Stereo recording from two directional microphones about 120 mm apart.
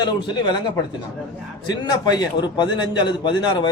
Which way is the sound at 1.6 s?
35° left (ahead or behind).